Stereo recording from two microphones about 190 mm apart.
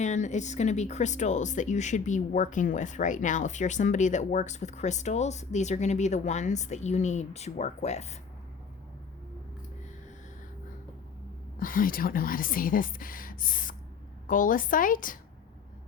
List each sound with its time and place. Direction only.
0.0 s speech: 40° left (ahead or behind)
11.6 s speech: 45° left (ahead or behind)